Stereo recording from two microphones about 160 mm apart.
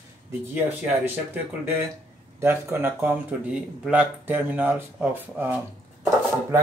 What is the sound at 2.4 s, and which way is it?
Speech, 15° right (ahead or behind).